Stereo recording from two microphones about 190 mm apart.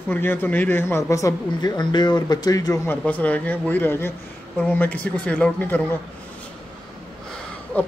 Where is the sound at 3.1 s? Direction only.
10° left (ahead or behind).